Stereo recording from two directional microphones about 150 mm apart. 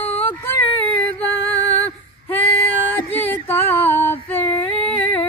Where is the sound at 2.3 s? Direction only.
10° left (ahead or behind).